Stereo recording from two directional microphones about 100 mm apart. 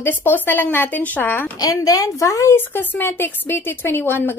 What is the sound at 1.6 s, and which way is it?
A woman's voice, 35° left (ahead or behind).